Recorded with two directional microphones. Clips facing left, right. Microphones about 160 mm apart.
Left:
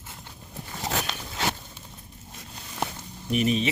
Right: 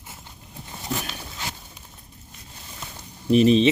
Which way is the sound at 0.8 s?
85° left.